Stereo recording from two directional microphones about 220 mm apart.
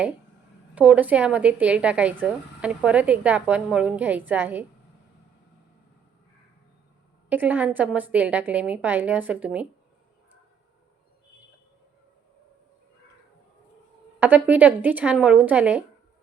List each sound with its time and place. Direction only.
0.8 s speech: 5° right (ahead or behind)
7.3 s a woman's voice: 5° right (ahead or behind)
14.2 s a woman's voice: 10° right (ahead or behind)